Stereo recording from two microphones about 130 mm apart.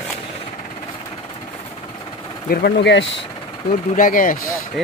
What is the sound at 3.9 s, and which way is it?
Speech, 90° left.